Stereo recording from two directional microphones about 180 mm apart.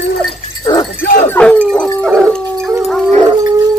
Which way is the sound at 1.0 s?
50° left (ahead or behind).